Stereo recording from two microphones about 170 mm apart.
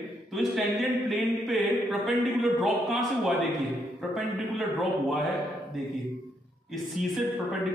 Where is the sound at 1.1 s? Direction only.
Centre (ahead or behind).